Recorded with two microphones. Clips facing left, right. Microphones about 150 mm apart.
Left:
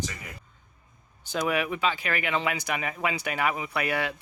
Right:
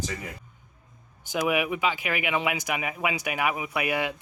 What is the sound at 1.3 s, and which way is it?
Speech, 15° right (ahead or behind).